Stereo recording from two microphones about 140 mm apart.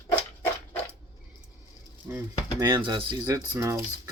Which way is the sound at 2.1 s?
15° right (ahead or behind).